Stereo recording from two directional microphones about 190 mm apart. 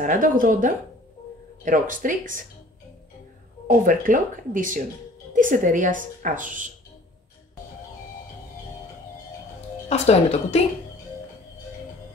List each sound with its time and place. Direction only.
0.0 s a woman's voice: 45° right (ahead or behind)
3.6 s a woman's voice: 45° right (ahead or behind)
9.8 s a woman's voice: 35° left (ahead or behind)